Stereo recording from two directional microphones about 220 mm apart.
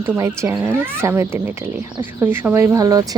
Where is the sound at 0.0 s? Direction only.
10° right (ahead or behind).